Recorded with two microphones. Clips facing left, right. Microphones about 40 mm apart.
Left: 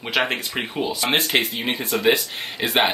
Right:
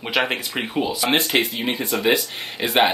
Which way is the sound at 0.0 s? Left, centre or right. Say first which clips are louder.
Even; centre.